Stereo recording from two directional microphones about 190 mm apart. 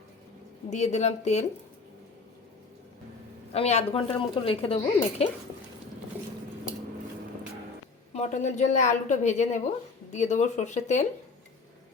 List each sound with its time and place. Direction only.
0.7 s speech: 35° left (ahead or behind)
3.5 s speech: 35° left (ahead or behind)
8.1 s speech: 40° left (ahead or behind)